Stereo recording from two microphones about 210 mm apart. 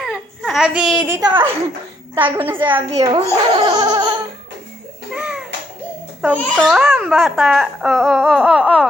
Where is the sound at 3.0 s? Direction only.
20° right (ahead or behind).